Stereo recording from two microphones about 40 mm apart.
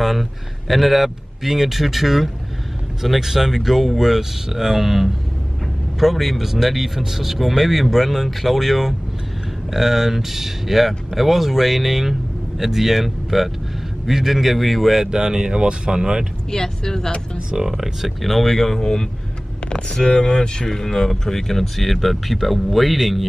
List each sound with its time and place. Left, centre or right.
0.0 s speech: centre
15.0 s speech: centre
16.4 s speech: centre
17.5 s speech: centre
18.2 s speech: centre